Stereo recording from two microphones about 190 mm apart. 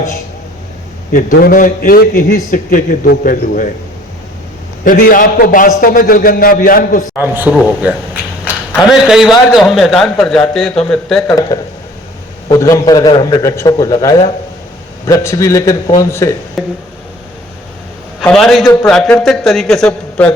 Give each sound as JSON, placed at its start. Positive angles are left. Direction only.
{"t": 1.1, "sound": "a man's voice", "side_deg": 45}
{"t": 4.8, "sound": "a man's voice", "side_deg": 50}
{"t": 7.2, "sound": "a man's voice", "side_deg": -10}
{"t": 12.5, "sound": "a man's voice", "side_deg": 15}
{"t": 16.6, "sound": "a man's voice", "side_deg": 0}
{"t": 18.2, "sound": "a man's voice", "side_deg": 0}